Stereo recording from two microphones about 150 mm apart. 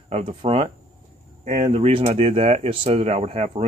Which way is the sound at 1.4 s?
55° right (ahead or behind).